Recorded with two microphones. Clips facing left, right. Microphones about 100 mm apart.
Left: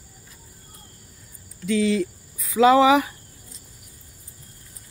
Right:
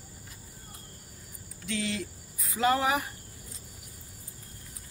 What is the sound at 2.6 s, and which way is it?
Speech, 90° left.